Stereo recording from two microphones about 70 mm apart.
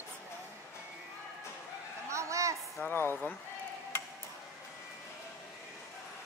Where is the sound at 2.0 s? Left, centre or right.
Right.